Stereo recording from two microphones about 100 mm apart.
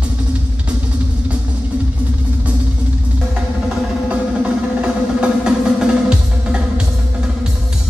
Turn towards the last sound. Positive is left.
turn(degrees=-10)  # may be behind; listen again after turning